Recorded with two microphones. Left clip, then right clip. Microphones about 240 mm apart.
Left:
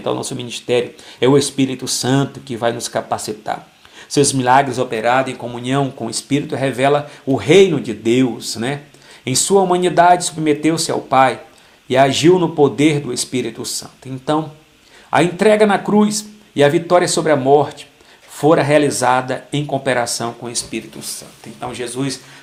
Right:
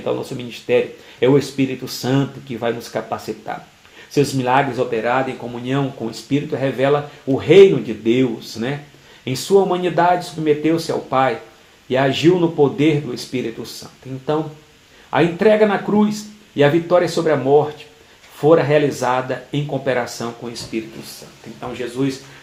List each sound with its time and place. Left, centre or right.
0.0 s speech: left